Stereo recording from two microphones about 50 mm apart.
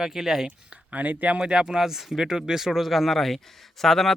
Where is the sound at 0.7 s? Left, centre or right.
Right.